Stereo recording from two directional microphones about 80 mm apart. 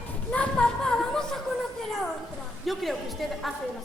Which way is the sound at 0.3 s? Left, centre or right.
Centre.